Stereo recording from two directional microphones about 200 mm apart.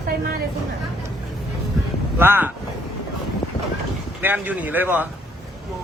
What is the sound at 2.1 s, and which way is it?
Speech, 10° right (ahead or behind).